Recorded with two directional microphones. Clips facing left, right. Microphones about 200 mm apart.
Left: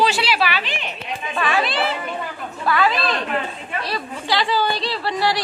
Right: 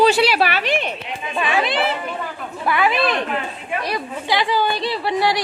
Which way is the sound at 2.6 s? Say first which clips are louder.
Right 1 dB; 20° right (ahead or behind).